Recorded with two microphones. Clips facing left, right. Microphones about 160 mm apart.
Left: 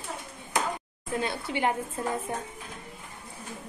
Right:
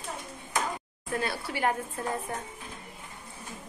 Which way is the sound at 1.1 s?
20° left (ahead or behind).